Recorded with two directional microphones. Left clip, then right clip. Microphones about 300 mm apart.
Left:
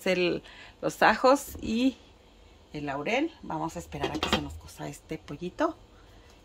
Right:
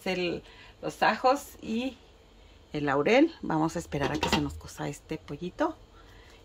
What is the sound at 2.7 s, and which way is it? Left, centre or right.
Speech, centre.